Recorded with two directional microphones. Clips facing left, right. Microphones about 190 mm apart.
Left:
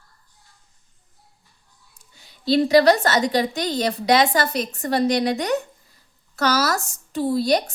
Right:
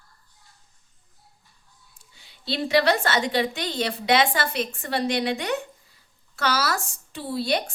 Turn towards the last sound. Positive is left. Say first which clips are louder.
# left 6 dB
turn(degrees=40)  # may be behind; listen again after turning